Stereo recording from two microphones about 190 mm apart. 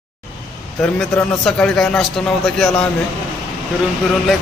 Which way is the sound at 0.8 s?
5° left (ahead or behind).